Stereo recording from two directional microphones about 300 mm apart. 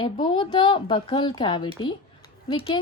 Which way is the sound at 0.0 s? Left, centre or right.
Centre.